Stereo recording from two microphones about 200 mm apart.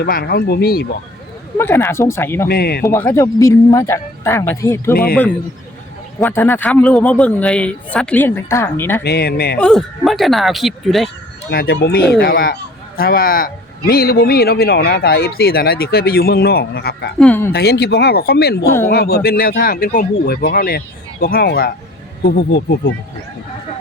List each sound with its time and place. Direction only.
0.0 s a man's voice: 50° left (ahead or behind)
1.5 s speech: 10° left (ahead or behind)
2.5 s a man's voice: 50° left (ahead or behind)
2.8 s speech: 15° left (ahead or behind)
6.1 s speech: 10° left (ahead or behind)
9.0 s a man's voice: 50° left (ahead or behind)
9.6 s speech: 5° left (ahead or behind)
11.5 s a man's voice: 50° left (ahead or behind)
17.2 s speech: 10° left (ahead or behind)
17.5 s a man's voice: 50° left (ahead or behind)